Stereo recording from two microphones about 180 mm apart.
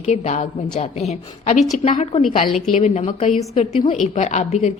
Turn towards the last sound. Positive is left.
turn(degrees=40)  # may be behind; listen again after turning